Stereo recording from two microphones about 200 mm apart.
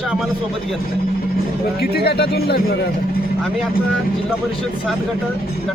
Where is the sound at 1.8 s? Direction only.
50° left (ahead or behind).